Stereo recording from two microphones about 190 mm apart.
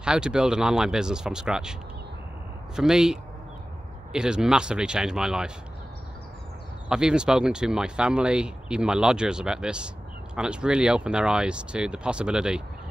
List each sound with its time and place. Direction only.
0.0 s speech: 5° right (ahead or behind)
6.9 s speech: 5° right (ahead or behind)